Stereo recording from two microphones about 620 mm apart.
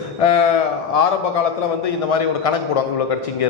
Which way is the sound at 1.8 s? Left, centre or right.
Left.